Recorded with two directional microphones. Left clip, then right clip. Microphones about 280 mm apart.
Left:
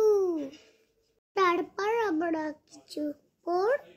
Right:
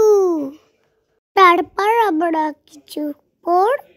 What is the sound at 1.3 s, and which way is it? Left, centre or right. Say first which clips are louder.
A child's voice: right 15 dB; right.